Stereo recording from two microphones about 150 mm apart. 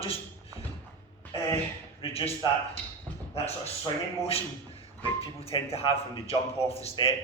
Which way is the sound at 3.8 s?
40° left (ahead or behind).